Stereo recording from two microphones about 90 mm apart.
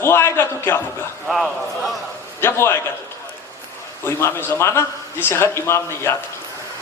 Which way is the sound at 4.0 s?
30° left (ahead or behind).